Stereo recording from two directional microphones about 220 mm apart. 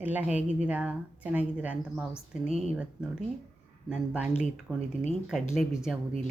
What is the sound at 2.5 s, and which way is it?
Speech, 30° right (ahead or behind).